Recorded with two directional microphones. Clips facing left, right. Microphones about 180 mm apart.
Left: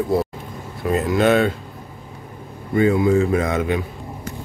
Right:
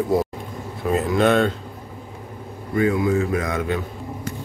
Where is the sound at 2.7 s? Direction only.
25° left (ahead or behind).